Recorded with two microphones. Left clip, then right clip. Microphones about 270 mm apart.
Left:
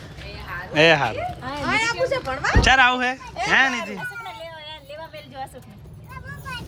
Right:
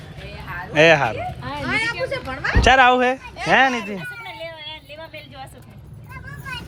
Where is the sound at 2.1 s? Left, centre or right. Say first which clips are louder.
Left 1 dB; left.